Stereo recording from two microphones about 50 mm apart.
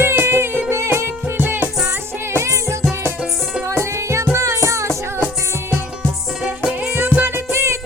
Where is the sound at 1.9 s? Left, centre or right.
Right.